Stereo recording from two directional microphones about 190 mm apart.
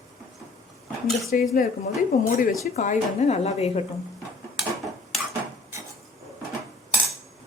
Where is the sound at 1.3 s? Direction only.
45° left (ahead or behind).